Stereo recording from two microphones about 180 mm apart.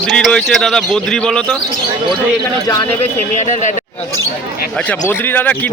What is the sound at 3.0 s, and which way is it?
Speech, 40° left (ahead or behind).